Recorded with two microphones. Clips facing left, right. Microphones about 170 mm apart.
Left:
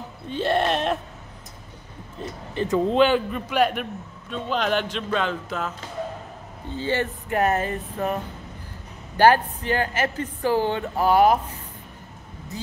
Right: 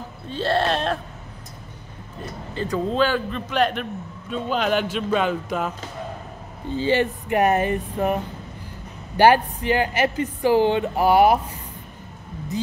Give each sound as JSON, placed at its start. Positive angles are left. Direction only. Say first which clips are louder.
{"t": 0.3, "sound": "a man's voice", "louder": "even", "side_deg": 15}
{"t": 2.5, "sound": "a man's voice", "louder": "left 3 dB", "side_deg": 20}
{"t": 4.3, "sound": "speech", "louder": "right 2 dB", "side_deg": -5}
{"t": 6.8, "sound": "speech", "louder": "right 5 dB", "side_deg": -15}